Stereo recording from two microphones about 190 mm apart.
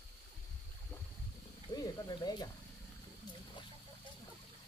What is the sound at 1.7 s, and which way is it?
Speech, 20° left (ahead or behind).